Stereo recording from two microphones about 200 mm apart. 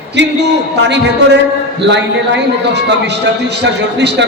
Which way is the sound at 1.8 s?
60° right (ahead or behind).